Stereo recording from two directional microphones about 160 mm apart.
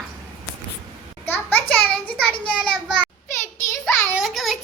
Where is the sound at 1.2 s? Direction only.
10° left (ahead or behind).